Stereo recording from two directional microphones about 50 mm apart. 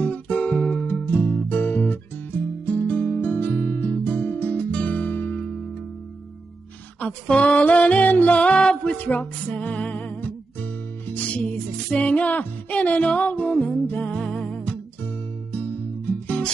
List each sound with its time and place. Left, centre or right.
0.0 s music: left
7.0 s a sound: left
7.5 s music: left
8.9 s music: left; by 14.6 s centre
16.1 s music: left